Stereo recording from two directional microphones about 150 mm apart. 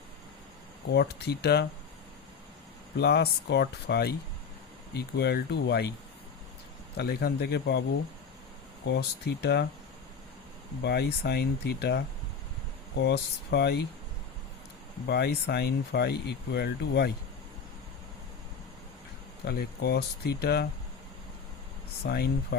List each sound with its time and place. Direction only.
0.9 s speech: 90° left
3.0 s speech: 90° left
6.9 s speech: 90° left
9.0 s speech: 90° left
10.8 s speech: 90° left
15.1 s speech: 90° left
19.5 s speech: 90° left
22.0 s speech: 90° left